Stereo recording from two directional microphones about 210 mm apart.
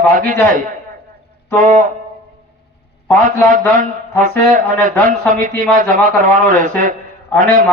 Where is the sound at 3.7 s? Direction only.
40° right (ahead or behind).